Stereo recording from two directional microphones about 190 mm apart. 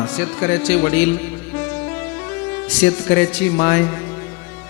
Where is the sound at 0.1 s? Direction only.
10° left (ahead or behind).